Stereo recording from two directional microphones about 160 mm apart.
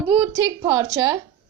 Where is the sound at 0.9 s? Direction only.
15° right (ahead or behind).